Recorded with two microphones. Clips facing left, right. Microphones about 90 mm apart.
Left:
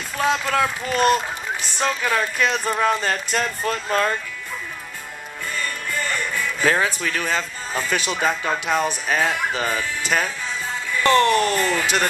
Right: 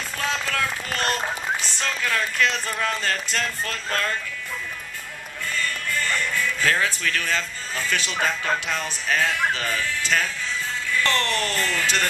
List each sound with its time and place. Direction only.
0.2 s speech: 20° left (ahead or behind)
5.5 s music: 15° left (ahead or behind)
8.2 s speech: 15° left (ahead or behind)